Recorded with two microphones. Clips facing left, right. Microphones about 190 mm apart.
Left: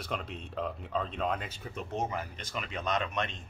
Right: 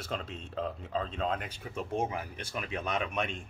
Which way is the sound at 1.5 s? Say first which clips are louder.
Right 3 dB; 10° right (ahead or behind).